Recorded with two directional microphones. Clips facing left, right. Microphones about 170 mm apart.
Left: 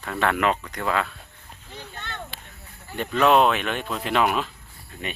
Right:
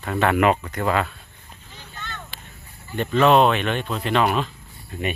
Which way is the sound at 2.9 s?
5° left (ahead or behind).